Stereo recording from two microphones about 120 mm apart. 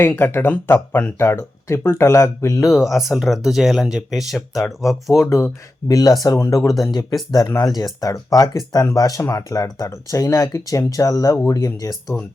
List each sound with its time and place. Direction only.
0.0 s speech: 15° left (ahead or behind)
2.6 s speech: centre (ahead or behind)
5.2 s speech: 25° left (ahead or behind)